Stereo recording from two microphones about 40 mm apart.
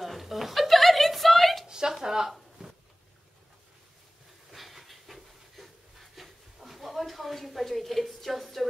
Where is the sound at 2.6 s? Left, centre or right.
Right.